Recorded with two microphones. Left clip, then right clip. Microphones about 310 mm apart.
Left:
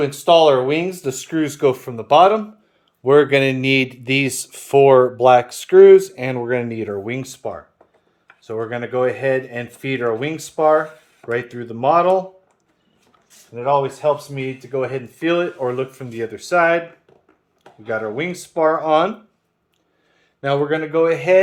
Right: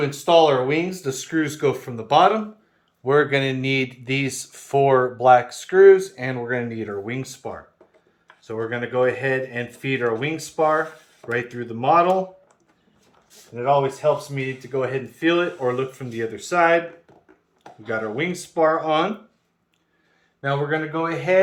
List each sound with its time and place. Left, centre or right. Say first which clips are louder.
0.0 s speech: left 3 dB; left
13.5 s speech: left 2 dB; left
17.8 s speech: left 2 dB; centre
20.4 s speech: left 4 dB; left